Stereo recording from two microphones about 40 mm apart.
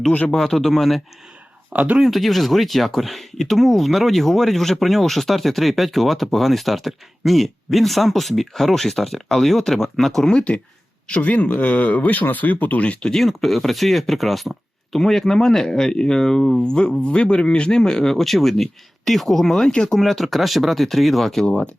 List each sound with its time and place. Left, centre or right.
0.3 s speech: centre
1.7 s speech: right
2.0 s speech: centre
11.2 s speech: left
13.1 s speech: centre
16.6 s speech: left
20.0 s speech: centre
21.4 s speech: left